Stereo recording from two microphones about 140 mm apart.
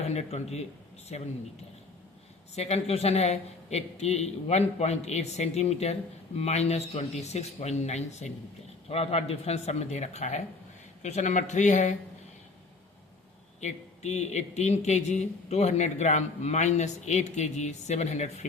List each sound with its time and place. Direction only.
0.1 s a man's voice: 50° left (ahead or behind)
2.6 s a man's voice: 50° left (ahead or behind)
13.6 s speech: 55° left (ahead or behind)